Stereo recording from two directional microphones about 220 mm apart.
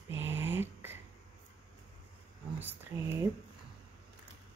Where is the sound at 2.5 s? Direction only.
10° right (ahead or behind).